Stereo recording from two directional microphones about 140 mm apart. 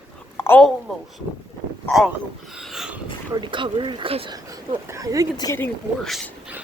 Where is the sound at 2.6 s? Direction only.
Centre (ahead or behind).